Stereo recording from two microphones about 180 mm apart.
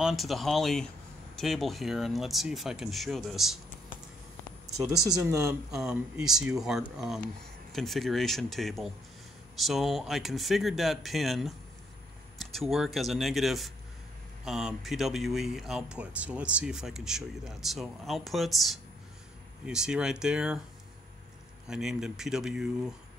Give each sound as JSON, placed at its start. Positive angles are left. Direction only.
{"t": 0.0, "sound": "speech", "side_deg": 0}
{"t": 4.8, "sound": "speech", "side_deg": -20}
{"t": 5.7, "sound": "speech", "side_deg": -5}
{"t": 21.6, "sound": "speech", "side_deg": -5}